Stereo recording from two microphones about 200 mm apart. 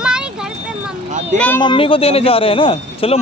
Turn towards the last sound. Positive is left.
turn(degrees=30)  # may be behind; listen again after turning